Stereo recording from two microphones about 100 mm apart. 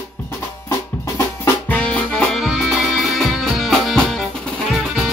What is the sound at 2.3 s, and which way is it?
Music, 5° right (ahead or behind).